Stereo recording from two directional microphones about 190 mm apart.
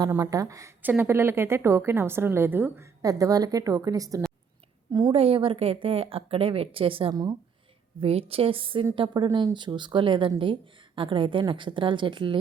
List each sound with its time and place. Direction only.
0.0 s speech: 15° right (ahead or behind)